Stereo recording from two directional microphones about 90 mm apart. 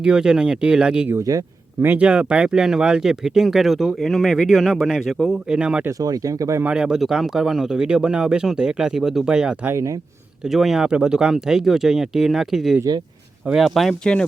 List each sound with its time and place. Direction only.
0.0 s speech: 10° right (ahead or behind)
1.1 s speech: 40° right (ahead or behind)
1.8 s speech: 15° right (ahead or behind)
6.0 s speech: 40° right (ahead or behind)
6.6 s speech: 10° right (ahead or behind)
9.6 s speech: 35° right (ahead or behind)
10.4 s speech: centre (ahead or behind)